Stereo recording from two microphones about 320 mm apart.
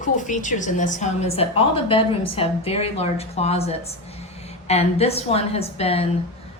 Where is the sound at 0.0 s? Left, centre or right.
Left.